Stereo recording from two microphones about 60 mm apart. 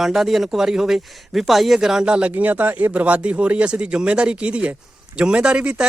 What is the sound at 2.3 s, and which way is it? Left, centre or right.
Speech, right.